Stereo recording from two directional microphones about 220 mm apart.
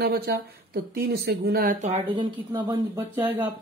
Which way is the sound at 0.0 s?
45° right (ahead or behind).